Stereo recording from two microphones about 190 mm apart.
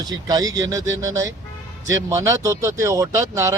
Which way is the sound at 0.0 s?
20° right (ahead or behind).